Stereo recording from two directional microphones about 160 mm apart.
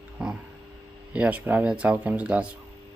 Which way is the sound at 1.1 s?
10° right (ahead or behind).